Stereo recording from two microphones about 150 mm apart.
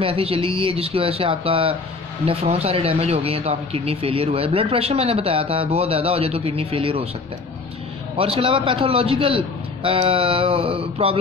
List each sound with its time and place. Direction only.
0.0 s speech: 40° right (ahead or behind)
8.2 s speech: 35° right (ahead or behind)